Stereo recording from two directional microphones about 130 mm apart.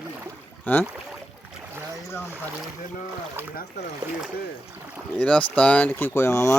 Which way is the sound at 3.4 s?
20° right (ahead or behind).